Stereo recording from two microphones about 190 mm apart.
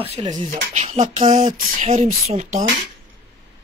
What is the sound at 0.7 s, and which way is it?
Speech, 40° right (ahead or behind).